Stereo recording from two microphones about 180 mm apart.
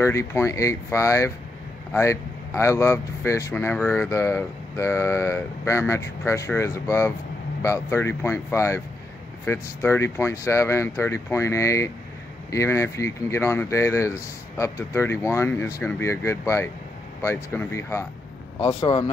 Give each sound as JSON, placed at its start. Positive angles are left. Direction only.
{"t": 0.0, "sound": "speech", "side_deg": 15}
{"t": 18.6, "sound": "speech", "side_deg": 30}